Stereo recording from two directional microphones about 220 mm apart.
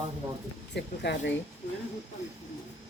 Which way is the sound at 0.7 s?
50° left (ahead or behind).